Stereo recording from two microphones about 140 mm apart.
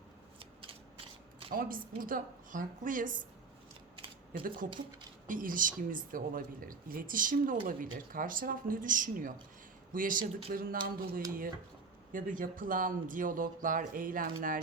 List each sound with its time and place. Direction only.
0.3 s scissors: 40° right (ahead or behind)
1.5 s speech: 90° right
4.4 s speech: 80° right
12.1 s speech: 75° right (ahead or behind)